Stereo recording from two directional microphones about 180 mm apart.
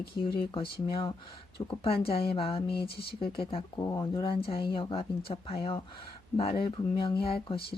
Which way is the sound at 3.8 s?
15° left (ahead or behind).